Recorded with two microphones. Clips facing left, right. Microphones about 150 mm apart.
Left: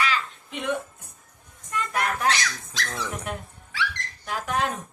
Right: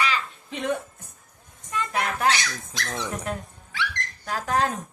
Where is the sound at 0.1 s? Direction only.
35° right (ahead or behind).